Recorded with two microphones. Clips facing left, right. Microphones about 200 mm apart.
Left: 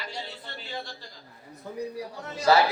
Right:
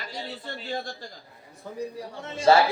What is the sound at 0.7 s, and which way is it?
Speech, 45° right (ahead or behind).